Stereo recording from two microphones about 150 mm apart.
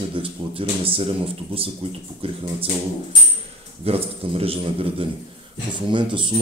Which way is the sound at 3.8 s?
40° right (ahead or behind).